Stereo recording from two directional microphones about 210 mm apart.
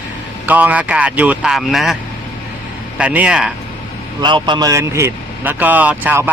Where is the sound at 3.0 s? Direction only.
5° right (ahead or behind).